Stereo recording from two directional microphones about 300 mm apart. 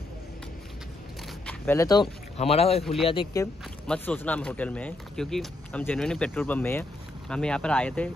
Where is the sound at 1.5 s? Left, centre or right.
Centre.